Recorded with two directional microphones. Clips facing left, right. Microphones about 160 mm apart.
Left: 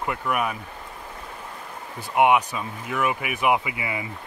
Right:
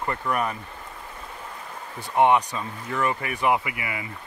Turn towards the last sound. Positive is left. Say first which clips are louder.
# left 2 dB
turn(degrees=20)  # may be behind; listen again after turning